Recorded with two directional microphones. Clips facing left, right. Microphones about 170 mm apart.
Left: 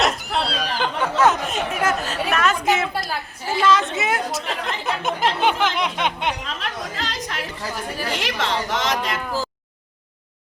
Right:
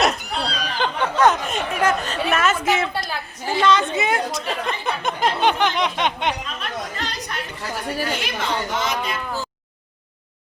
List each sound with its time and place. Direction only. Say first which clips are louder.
0.0 s chatter: even; 5° left (ahead or behind)
2.7 s a woman's voice: even; centre (ahead or behind)
6.4 s chatter: even; 90° left
8.1 s speech: left 1 dB; 90° left